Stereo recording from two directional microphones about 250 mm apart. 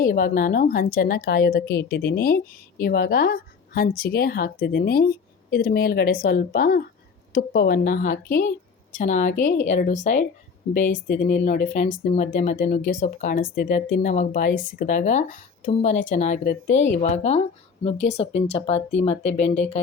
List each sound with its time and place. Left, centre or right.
0.0 s a woman's voice: left
12.1 s a woman's voice: left